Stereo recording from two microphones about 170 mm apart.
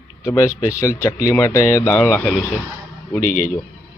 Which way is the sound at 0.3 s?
15° left (ahead or behind).